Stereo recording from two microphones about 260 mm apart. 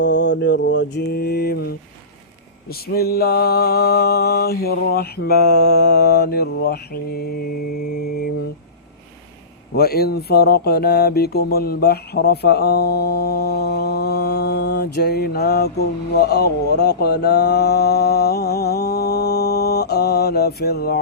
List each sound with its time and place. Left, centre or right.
0.0 s mantra: left
9.7 s speech: left